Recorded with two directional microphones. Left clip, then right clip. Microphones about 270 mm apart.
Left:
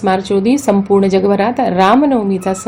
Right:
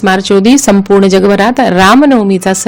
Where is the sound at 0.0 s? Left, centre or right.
Right.